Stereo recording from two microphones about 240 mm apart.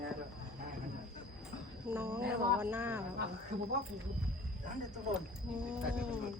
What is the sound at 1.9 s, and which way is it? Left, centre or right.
Speech, centre.